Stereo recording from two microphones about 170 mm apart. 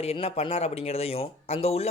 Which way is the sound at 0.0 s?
35° left (ahead or behind).